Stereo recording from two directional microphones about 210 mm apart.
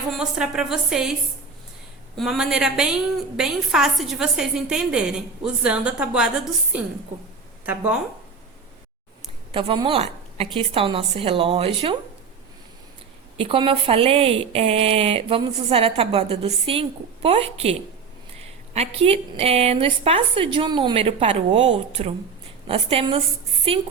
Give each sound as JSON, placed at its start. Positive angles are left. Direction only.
{"t": 0.1, "sound": "a woman's voice", "side_deg": 0}
{"t": 2.1, "sound": "a woman's voice", "side_deg": 0}
{"t": 7.6, "sound": "speech", "side_deg": -5}
{"t": 9.5, "sound": "a woman's voice", "side_deg": -25}
{"t": 13.3, "sound": "a woman's voice", "side_deg": -25}